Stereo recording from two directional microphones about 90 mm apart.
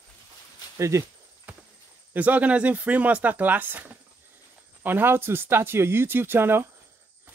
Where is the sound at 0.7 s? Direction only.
30° right (ahead or behind).